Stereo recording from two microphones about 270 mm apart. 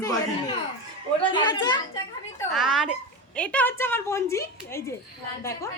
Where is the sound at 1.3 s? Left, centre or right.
Centre.